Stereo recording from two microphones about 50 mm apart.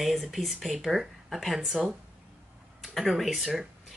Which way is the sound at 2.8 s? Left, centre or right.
Centre.